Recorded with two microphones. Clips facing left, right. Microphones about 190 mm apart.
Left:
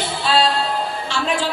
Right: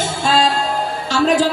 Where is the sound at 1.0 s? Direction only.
40° right (ahead or behind).